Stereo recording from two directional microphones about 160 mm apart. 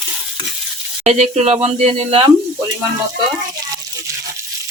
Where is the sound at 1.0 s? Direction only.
45° right (ahead or behind).